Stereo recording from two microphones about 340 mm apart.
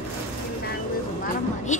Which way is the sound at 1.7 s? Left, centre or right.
Left.